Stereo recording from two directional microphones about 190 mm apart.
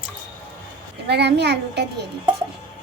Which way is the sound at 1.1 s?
60° right (ahead or behind).